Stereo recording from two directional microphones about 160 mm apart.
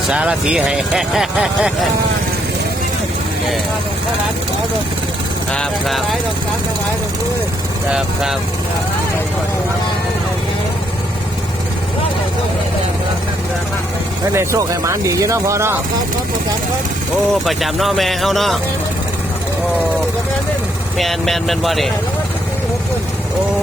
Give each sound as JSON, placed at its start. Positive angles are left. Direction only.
{"t": 0.1, "sound": "speech", "side_deg": -5}
{"t": 5.5, "sound": "speech", "side_deg": 0}
{"t": 7.9, "sound": "speech", "side_deg": -5}
{"t": 14.3, "sound": "speech", "side_deg": -20}
{"t": 17.4, "sound": "speech", "side_deg": 0}
{"t": 21.0, "sound": "speech", "side_deg": 0}